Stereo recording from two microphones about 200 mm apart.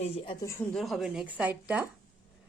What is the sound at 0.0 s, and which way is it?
Speech, 30° left (ahead or behind).